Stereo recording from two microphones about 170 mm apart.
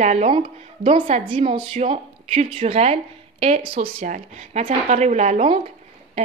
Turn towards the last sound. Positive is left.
turn(degrees=-35)  # may be behind; listen again after turning